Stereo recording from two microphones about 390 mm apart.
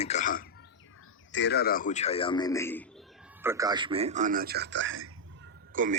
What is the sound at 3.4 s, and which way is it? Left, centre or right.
A man's voice, centre.